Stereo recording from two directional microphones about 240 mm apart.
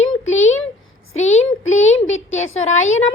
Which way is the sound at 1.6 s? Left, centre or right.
Left.